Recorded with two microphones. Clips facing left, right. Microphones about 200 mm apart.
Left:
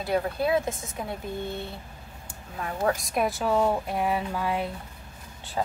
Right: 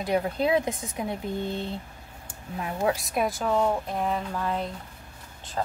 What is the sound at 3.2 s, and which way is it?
Speech, centre (ahead or behind).